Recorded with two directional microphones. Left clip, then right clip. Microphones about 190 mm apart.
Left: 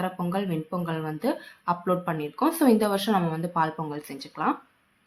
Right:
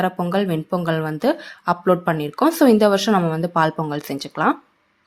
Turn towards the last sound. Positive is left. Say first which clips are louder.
# right 8 dB
turn(degrees=-45)  # may be behind; listen again after turning